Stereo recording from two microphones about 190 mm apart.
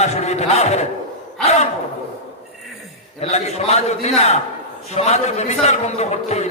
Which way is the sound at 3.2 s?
35° left (ahead or behind).